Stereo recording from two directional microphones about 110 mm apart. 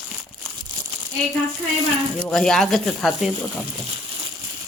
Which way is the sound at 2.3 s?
5° left (ahead or behind).